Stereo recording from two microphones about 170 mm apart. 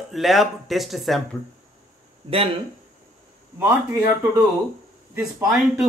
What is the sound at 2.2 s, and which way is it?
Speech, 35° right (ahead or behind).